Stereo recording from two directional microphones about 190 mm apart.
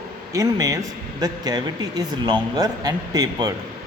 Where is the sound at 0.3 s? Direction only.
20° right (ahead or behind).